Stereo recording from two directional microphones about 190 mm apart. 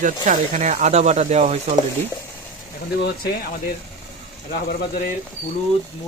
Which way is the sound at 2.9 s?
60° left (ahead or behind).